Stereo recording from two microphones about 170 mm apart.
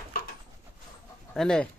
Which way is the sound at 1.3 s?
5° left (ahead or behind).